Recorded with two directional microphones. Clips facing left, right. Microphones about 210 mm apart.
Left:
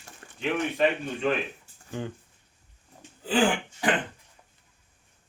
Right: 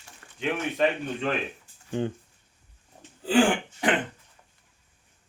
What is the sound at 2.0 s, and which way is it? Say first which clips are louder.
Speech: right 6 dB; 25° right (ahead or behind).